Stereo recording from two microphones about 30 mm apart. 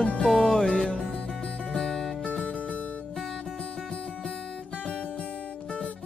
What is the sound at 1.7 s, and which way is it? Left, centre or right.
Music, centre.